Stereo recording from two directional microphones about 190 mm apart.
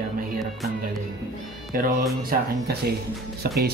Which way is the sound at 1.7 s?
50° right (ahead or behind).